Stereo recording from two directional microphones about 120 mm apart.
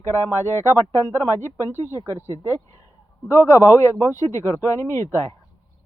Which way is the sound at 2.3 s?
25° left (ahead or behind).